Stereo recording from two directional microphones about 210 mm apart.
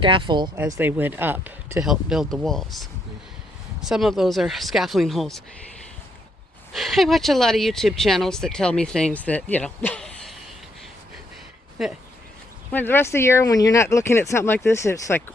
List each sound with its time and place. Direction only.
0.0 s speech: 25° right (ahead or behind)
0.5 s speech: 10° right (ahead or behind)
6.7 s speech: centre (ahead or behind)
11.8 s speech: centre (ahead or behind)
12.7 s speech: 10° left (ahead or behind)